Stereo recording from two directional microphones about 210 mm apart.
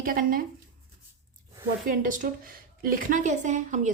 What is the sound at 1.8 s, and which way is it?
A woman's voice, 40° right (ahead or behind).